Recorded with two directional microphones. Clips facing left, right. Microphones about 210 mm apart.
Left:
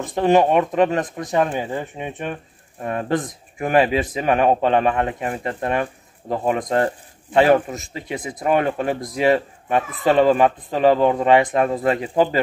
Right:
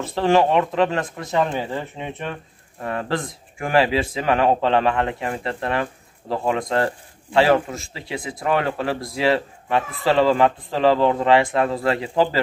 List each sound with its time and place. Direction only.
0.0 s speech: 15° left (ahead or behind)